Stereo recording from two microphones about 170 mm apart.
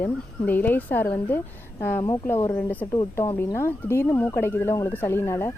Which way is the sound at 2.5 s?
10° left (ahead or behind).